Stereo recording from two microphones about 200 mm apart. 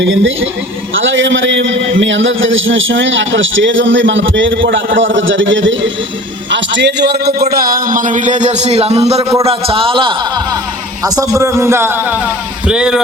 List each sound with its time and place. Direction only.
0.0 s a man's voice: 70° right (ahead or behind); by 13.0 s 5° right (ahead or behind)